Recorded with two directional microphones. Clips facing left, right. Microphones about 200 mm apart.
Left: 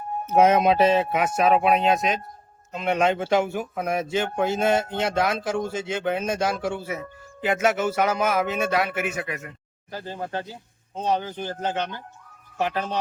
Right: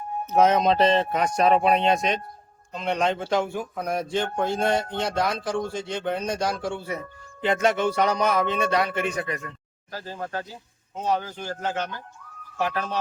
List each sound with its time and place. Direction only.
0.3 s speech: 10° left (ahead or behind)
9.9 s speech: 25° left (ahead or behind)